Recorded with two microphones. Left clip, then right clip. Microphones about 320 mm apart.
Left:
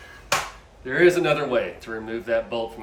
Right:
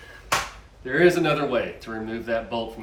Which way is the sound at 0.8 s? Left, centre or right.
Centre.